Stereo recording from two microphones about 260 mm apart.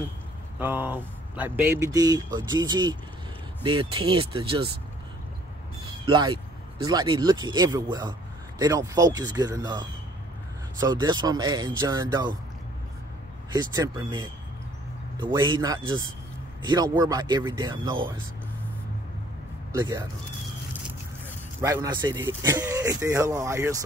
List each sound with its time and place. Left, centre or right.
0.6 s speech: centre
6.0 s speech: centre
13.5 s speech: centre
19.8 s speech: centre
21.5 s speech: centre